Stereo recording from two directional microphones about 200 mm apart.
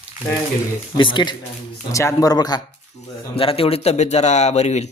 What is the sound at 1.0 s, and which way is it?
Speech, 25° left (ahead or behind).